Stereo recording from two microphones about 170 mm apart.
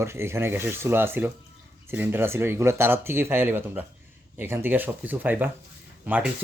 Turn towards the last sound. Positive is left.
turn(degrees=-10)  # may be behind; listen again after turning